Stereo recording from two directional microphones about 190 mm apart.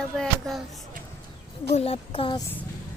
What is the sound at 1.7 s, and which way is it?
Speech, 30° left (ahead or behind).